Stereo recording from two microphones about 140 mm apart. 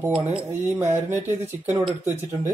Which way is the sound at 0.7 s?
15° right (ahead or behind).